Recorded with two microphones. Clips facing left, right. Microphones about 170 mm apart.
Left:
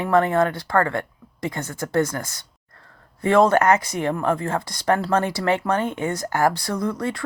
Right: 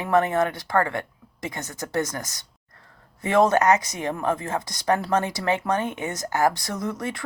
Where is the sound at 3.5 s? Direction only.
55° left (ahead or behind).